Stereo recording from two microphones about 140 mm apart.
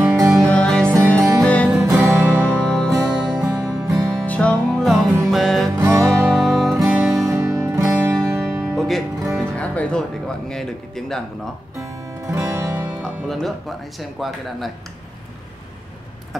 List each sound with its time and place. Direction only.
0.0 s music: 10° right (ahead or behind)
0.4 s music: 5° left (ahead or behind)
1.8 s music: 20° right (ahead or behind)
2.7 s music: 5° left (ahead or behind)
4.1 s music: 5° left (ahead or behind)
5.8 s music: 20° right (ahead or behind)
6.3 s music: centre (ahead or behind)
7.2 s music: 20° right (ahead or behind)
8.5 s music: centre (ahead or behind)
12.3 s music: 20° right (ahead or behind)
13.0 s speech: centre (ahead or behind)